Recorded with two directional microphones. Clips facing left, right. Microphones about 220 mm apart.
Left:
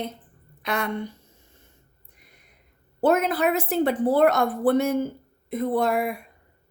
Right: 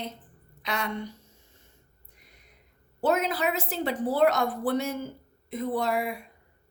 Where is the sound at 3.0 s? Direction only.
55° left (ahead or behind).